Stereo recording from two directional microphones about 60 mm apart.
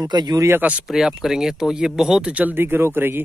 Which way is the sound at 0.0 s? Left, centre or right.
Right.